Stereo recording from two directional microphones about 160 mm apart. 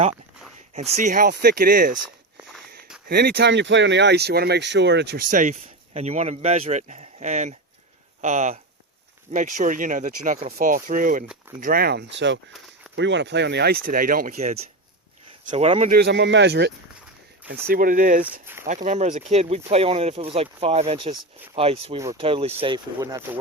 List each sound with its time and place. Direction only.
0.7 s speech: 45° right (ahead or behind)
1.3 s speech: 90° right; by 2.0 s 60° right (ahead or behind)
3.1 s speech: 80° right
5.3 s speech: 50° right (ahead or behind)
11.6 s speech: 70° right (ahead or behind)
14.3 s speech: 45° right (ahead or behind)
15.9 s speech: 90° right
17.5 s speech: 65° right (ahead or behind); by 23.4 s 20° right (ahead or behind)